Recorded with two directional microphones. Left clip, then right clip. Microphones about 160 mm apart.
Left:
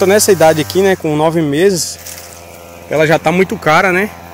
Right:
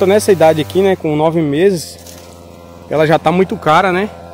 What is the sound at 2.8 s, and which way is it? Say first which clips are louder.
Speech: even; 5° right (ahead or behind).